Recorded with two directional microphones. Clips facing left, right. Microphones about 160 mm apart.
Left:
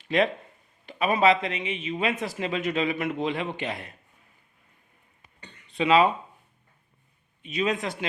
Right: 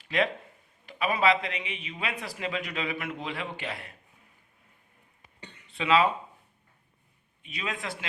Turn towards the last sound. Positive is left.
turn(degrees=20)  # may be behind; listen again after turning